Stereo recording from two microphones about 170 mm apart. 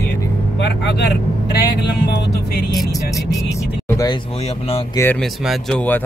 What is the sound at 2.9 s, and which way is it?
Speech, 20° left (ahead or behind).